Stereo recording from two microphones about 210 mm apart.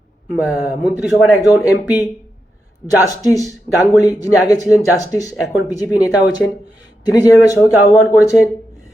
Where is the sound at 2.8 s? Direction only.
15° left (ahead or behind).